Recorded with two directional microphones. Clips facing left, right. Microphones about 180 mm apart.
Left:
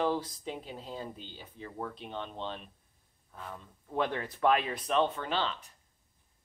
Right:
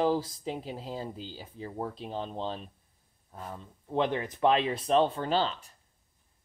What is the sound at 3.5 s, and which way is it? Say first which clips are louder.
Speech: right 3 dB; 20° right (ahead or behind).